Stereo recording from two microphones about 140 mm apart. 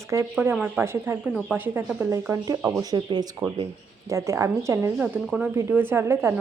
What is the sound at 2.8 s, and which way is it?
Speech, 30° right (ahead or behind).